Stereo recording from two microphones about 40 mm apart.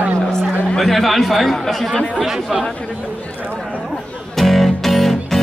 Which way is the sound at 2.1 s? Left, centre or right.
Centre.